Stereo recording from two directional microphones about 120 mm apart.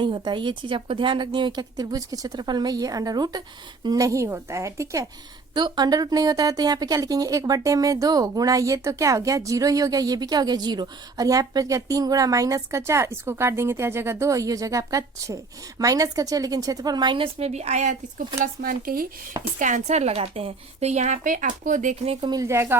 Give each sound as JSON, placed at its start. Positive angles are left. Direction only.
{"t": 0.0, "sound": "a woman's voice", "side_deg": -40}
{"t": 5.5, "sound": "a woman's voice", "side_deg": -35}
{"t": 19.5, "sound": "a woman's voice", "side_deg": -90}
{"t": 22.3, "sound": "speech", "side_deg": -25}